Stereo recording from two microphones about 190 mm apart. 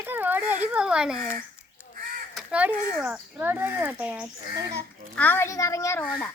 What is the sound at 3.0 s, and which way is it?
Speech, 10° right (ahead or behind).